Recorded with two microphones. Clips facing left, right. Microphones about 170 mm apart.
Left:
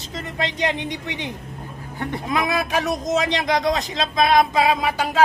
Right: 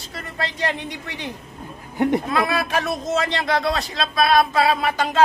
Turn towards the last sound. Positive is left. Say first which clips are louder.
# even
turn(degrees=10)  # may be behind; listen again after turning